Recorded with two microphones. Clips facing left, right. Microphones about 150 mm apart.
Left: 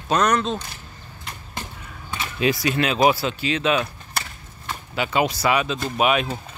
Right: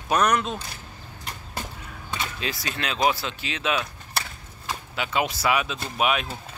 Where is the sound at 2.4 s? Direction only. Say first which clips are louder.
Left 14 dB; 10° left (ahead or behind).